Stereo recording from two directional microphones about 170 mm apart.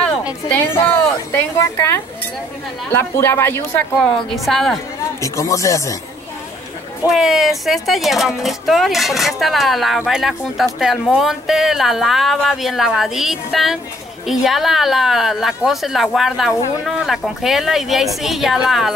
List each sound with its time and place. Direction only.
0.5 s a woman's voice: 10° left (ahead or behind)
4.5 s speech: centre (ahead or behind)
5.2 s speech: 20° left (ahead or behind)
7.1 s speech: centre (ahead or behind)